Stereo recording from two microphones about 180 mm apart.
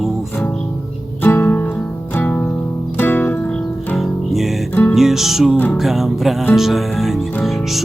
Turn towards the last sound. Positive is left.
turn(degrees=0)  # may be behind; listen again after turning